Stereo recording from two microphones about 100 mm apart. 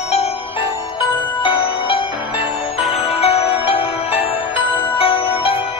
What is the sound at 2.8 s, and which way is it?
Music, 90° left.